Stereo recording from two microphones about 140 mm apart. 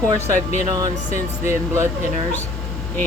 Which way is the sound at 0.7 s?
25° right (ahead or behind).